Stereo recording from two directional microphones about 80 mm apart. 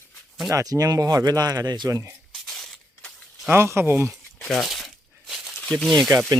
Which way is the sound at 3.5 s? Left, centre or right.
Right.